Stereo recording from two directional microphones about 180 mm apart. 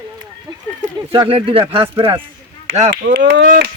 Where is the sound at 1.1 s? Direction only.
30° right (ahead or behind).